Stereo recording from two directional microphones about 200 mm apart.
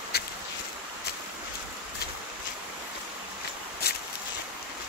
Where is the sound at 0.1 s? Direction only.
50° left (ahead or behind).